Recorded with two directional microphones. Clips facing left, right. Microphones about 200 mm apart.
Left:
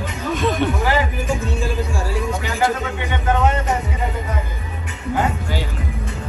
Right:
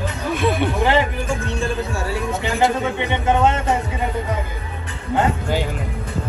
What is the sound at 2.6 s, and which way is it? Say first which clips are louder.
Speech: right 2 dB; 20° right (ahead or behind).